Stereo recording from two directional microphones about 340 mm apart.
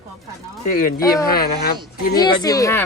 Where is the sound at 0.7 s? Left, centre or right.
Left.